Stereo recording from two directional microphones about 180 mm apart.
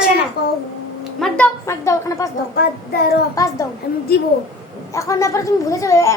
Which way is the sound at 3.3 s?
20° left (ahead or behind).